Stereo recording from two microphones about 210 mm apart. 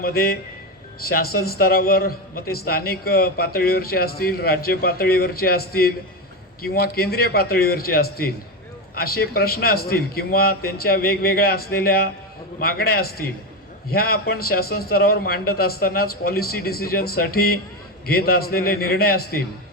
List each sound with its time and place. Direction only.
0.0 s a man's voice: 45° left (ahead or behind)